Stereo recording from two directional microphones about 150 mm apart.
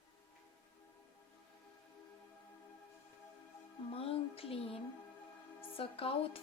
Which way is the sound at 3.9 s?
40° left (ahead or behind).